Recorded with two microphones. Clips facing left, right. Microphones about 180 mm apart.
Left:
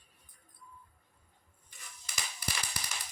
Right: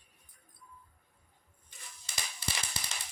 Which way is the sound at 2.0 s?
25° right (ahead or behind).